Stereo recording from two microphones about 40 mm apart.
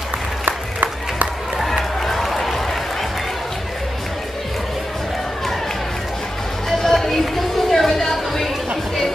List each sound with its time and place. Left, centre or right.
0.5 s crowd: right
1.6 s run: centre
6.7 s a sound: centre